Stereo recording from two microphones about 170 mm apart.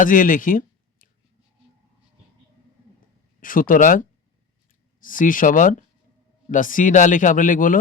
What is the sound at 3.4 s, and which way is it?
Speech, 55° left (ahead or behind).